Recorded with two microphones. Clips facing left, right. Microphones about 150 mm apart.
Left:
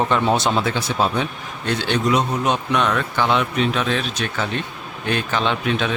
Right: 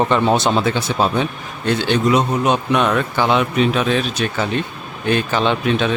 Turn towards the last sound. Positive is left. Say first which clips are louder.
# right 4 dB
turn(degrees=0)  # may be behind; listen again after turning